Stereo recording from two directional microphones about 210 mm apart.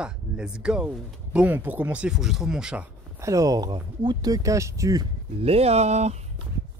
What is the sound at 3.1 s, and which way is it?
Speech, 15° right (ahead or behind).